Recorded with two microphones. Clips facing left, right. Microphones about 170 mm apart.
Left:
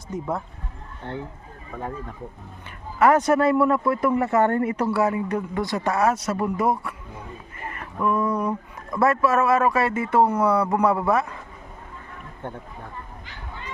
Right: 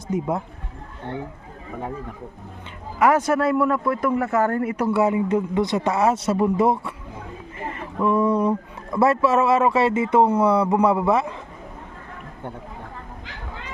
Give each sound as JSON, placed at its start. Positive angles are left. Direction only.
{"t": 0.1, "sound": "speech", "side_deg": -15}
{"t": 1.7, "sound": "speech", "side_deg": -10}
{"t": 3.0, "sound": "speech", "side_deg": -10}
{"t": 4.9, "sound": "speech", "side_deg": -20}
{"t": 7.7, "sound": "a sound", "side_deg": -25}
{"t": 9.0, "sound": "speech", "side_deg": -25}